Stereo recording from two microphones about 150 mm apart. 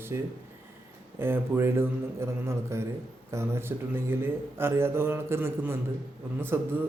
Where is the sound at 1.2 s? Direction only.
15° right (ahead or behind).